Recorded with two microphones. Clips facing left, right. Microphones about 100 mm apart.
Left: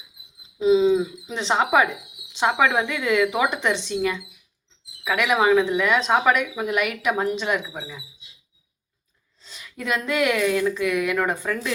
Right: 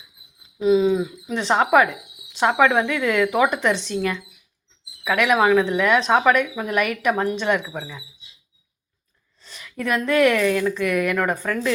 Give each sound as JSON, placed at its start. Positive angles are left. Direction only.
{"t": 0.6, "sound": "a woman's voice", "side_deg": 20}
{"t": 10.1, "sound": "speech", "side_deg": 10}
{"t": 10.8, "sound": "speech", "side_deg": -45}
{"t": 11.3, "sound": "speech", "side_deg": 5}